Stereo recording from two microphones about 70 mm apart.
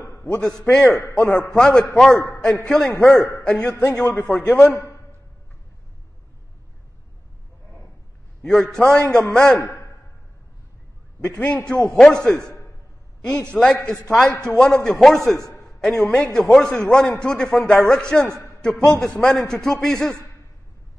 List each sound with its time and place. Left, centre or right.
0.2 s a man's voice: centre
1.1 s a man's voice: centre
3.6 s a man's voice: left
8.4 s a man's voice: centre
9.6 s a man's voice: left
11.3 s a man's voice: left